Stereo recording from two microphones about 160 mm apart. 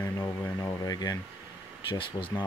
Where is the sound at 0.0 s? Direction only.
20° left (ahead or behind).